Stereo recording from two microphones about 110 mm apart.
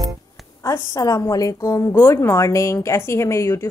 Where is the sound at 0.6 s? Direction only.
30° left (ahead or behind).